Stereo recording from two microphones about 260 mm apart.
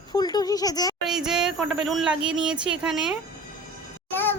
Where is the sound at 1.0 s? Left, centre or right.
Centre.